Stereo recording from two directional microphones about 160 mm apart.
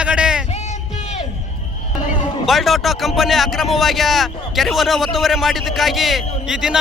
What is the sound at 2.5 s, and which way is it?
A man's voice, centre (ahead or behind).